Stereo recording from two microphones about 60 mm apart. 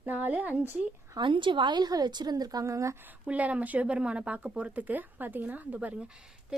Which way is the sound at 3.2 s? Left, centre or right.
Right.